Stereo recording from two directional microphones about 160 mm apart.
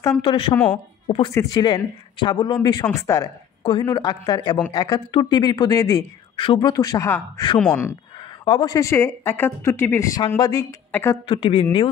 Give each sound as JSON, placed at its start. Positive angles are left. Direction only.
{"t": 0.2, "sound": "speech", "side_deg": 35}
{"t": 6.7, "sound": "speech", "side_deg": 20}
{"t": 8.5, "sound": "speech", "side_deg": 25}
{"t": 10.9, "sound": "a woman's voice", "side_deg": 15}
{"t": 11.2, "sound": "speech", "side_deg": 35}